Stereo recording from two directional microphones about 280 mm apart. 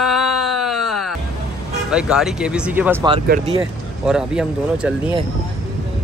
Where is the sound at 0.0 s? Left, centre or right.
Centre.